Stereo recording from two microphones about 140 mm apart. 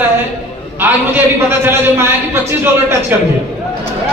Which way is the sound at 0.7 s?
15° right (ahead or behind).